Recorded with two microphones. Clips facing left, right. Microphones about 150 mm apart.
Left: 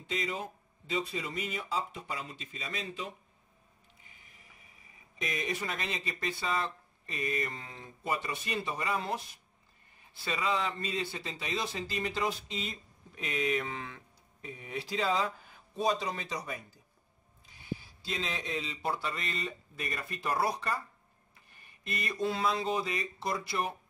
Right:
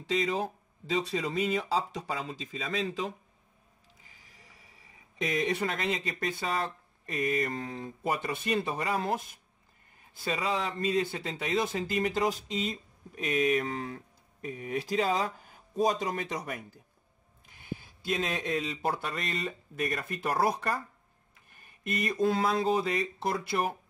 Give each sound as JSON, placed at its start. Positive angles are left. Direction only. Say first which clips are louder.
{"t": 0.0, "sound": "speech", "louder": "right 6 dB", "side_deg": -90}
{"t": 4.2, "sound": "a sound", "louder": "right 2 dB", "side_deg": -90}
{"t": 5.2, "sound": "speech", "louder": "right 6 dB", "side_deg": -75}